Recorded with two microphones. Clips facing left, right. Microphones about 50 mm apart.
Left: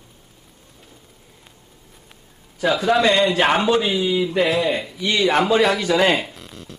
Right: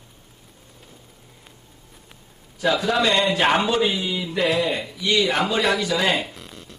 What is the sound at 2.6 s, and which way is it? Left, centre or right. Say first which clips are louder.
A man's voice: left 3 dB; centre.